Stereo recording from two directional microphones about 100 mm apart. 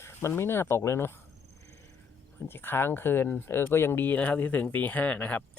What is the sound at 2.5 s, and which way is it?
Speech, 20° left (ahead or behind).